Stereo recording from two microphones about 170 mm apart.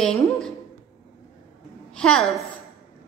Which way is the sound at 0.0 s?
5° left (ahead or behind).